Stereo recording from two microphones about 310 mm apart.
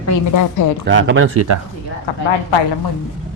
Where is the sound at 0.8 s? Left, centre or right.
Right.